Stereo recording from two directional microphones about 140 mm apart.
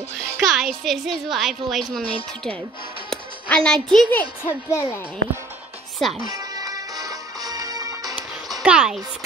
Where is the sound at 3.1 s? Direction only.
5° left (ahead or behind).